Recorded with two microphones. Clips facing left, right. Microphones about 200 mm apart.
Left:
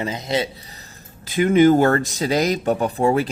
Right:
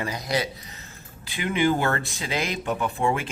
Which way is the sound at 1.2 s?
45° left (ahead or behind).